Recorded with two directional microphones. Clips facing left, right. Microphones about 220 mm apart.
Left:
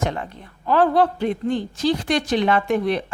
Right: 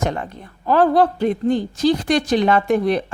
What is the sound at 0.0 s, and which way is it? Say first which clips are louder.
Speech: right 2 dB; 40° right (ahead or behind).